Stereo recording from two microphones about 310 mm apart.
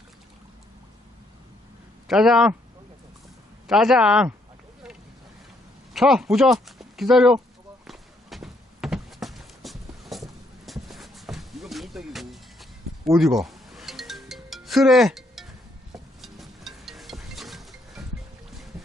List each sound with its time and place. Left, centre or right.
2.0 s a man's voice: centre
3.7 s a man's voice: centre
5.9 s speech: centre
7.9 s walk: centre
10.7 s a sound: centre
13.1 s speech: centre
13.4 s music: centre